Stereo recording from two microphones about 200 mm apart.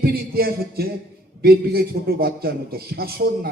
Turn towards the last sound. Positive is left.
turn(degrees=-50)  # may be behind; listen again after turning